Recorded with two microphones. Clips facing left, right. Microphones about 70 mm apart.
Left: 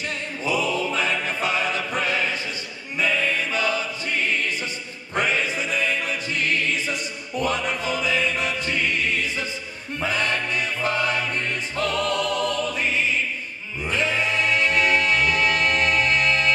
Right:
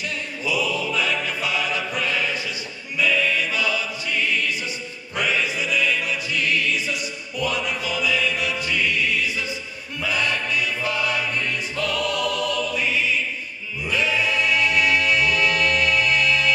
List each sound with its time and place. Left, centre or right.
0.0 s music: left